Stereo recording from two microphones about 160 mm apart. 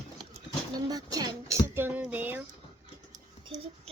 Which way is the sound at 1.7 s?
10° right (ahead or behind).